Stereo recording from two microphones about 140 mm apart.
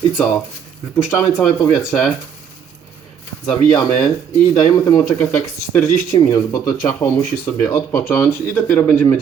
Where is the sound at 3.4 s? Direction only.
25° left (ahead or behind).